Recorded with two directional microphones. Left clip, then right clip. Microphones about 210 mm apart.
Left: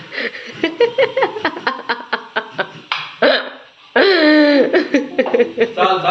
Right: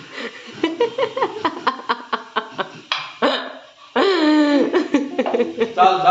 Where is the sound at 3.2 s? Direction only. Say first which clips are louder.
Left 6 dB; centre (ahead or behind).